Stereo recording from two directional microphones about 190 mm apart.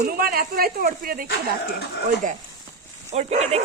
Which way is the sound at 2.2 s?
45° right (ahead or behind).